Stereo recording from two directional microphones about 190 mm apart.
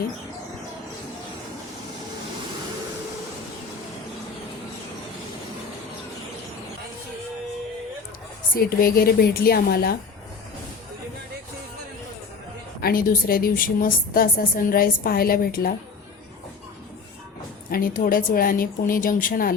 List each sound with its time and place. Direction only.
8.5 s a woman's voice: 50° left (ahead or behind)
12.8 s a woman's voice: 50° left (ahead or behind)
17.7 s a woman's voice: 50° left (ahead or behind)